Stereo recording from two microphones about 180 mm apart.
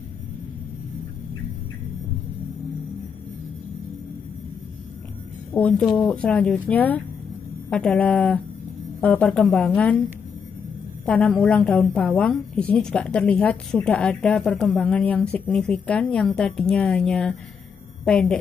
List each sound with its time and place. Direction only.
5.5 s speech: 5° left (ahead or behind)
11.1 s a woman's voice: 5° left (ahead or behind)